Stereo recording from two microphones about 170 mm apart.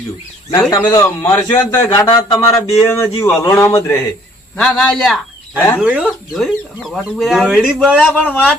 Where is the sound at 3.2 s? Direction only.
15° left (ahead or behind).